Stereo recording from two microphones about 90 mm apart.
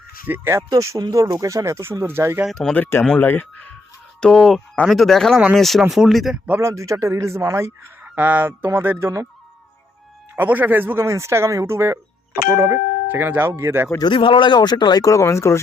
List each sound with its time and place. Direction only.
0.3 s speech: 25° right (ahead or behind)
0.7 s speech: 40° right (ahead or behind)
2.5 s speech: 5° left (ahead or behind)
2.7 s speech: 20° left (ahead or behind)
4.2 s speech: 10° left (ahead or behind)
6.6 s speech: 35° right (ahead or behind)
8.0 s speech: 20° right (ahead or behind)
10.3 s speech: 20° right (ahead or behind); by 12.8 s 35° right (ahead or behind)
13.1 s speech: 25° right (ahead or behind)
14.0 s speech: 65° left (ahead or behind); by 15.5 s 30° left (ahead or behind)